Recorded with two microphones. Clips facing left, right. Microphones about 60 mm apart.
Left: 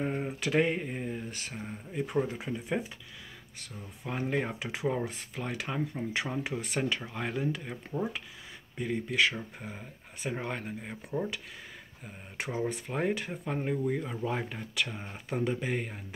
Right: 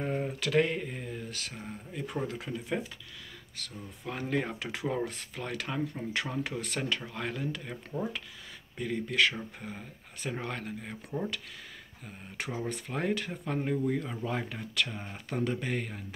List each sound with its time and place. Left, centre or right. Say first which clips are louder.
0.0 s a sound: even; centre
3.5 s speech: right 3 dB; centre
12.4 s speech: left 3 dB; centre